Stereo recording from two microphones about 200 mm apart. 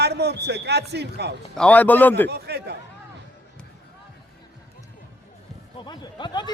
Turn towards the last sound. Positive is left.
turn(degrees=20)  # may be behind; listen again after turning